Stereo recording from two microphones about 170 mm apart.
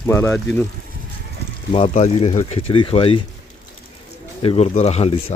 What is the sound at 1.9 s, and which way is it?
Speech, 40° left (ahead or behind).